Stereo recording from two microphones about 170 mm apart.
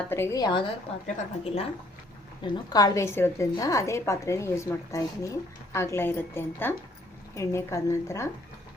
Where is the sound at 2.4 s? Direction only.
20° left (ahead or behind).